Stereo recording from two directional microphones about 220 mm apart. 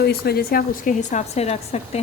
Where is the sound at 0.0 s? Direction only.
45° left (ahead or behind).